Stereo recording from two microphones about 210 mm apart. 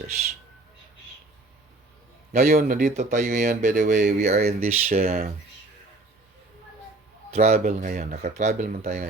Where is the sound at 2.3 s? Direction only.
45° right (ahead or behind).